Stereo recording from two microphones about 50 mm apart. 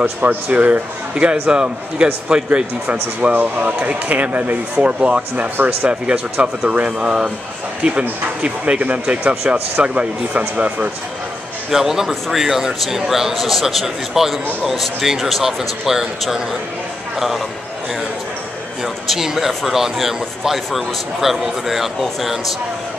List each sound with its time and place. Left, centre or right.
0.2 s speech: right
5.6 s speech: right
5.9 s speech: right
7.1 s a man's voice: centre
7.8 s speech: right
11.7 s a man's voice: centre
19.0 s speech: centre